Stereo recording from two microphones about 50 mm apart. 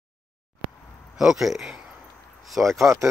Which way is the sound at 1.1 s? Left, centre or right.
Centre.